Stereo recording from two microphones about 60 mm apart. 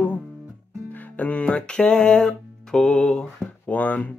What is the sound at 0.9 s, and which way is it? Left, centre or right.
Music, left.